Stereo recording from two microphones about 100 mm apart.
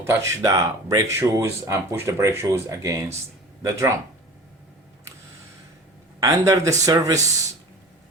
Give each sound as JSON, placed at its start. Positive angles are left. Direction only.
{"t": 0.0, "sound": "speech", "side_deg": -30}
{"t": 6.1, "sound": "speech", "side_deg": -35}